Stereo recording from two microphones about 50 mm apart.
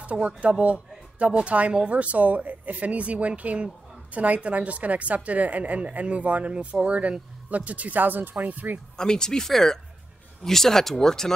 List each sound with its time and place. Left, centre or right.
0.0 s speech: right
8.9 s speech: centre